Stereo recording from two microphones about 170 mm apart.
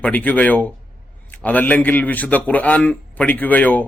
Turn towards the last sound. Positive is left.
turn(degrees=10)  # may be behind; listen again after turning